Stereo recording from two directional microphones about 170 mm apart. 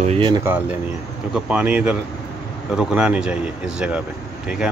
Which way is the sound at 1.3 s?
5° right (ahead or behind).